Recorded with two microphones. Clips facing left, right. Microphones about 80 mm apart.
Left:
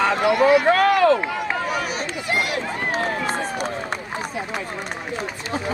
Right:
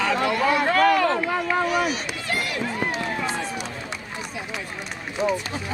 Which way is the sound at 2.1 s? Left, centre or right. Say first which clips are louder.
Left 4 dB; centre.